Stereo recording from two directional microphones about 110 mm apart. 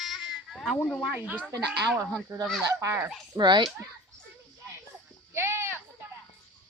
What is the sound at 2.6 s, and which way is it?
Speech, 25° right (ahead or behind).